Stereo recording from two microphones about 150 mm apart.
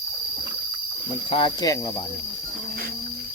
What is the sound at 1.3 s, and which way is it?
Speech, 35° left (ahead or behind).